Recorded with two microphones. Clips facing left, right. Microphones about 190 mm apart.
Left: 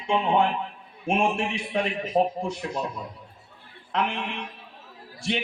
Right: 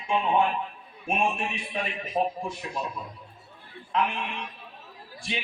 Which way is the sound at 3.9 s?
75° left (ahead or behind).